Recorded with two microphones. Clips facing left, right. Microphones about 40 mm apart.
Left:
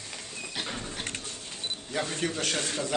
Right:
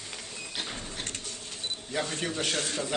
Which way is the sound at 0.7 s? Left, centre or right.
Left.